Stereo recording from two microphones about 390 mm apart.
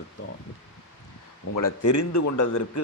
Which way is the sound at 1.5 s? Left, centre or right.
Left.